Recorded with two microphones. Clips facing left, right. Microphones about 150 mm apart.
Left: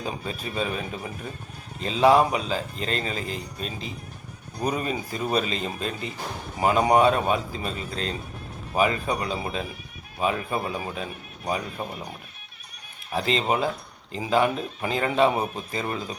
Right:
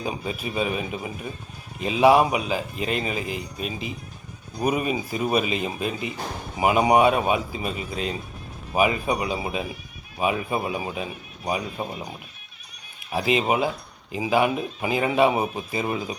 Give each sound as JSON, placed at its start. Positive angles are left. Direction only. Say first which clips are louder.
{"t": 0.0, "sound": "speech", "louder": "right 2 dB", "side_deg": -15}
{"t": 13.1, "sound": "speech", "louder": "right 2 dB", "side_deg": -10}